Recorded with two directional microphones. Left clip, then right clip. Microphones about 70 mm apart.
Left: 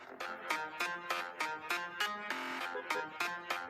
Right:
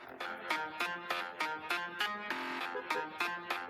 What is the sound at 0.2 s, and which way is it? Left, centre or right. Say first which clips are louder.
Music: right 1 dB; left.